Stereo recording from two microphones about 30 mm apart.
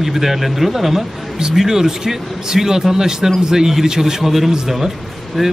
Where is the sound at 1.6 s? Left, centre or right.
Centre.